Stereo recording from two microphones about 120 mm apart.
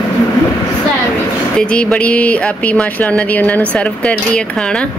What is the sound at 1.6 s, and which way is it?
Speech, 10° left (ahead or behind).